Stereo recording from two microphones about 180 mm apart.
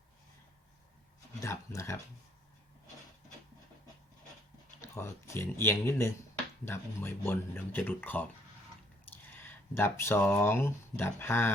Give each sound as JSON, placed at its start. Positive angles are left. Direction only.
{"t": 1.4, "sound": "speech", "side_deg": 15}
{"t": 4.9, "sound": "speech", "side_deg": 15}
{"t": 9.4, "sound": "speech", "side_deg": 10}